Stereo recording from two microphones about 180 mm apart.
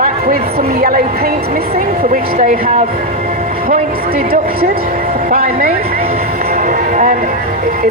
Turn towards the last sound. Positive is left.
turn(degrees=-50)  # may be behind; listen again after turning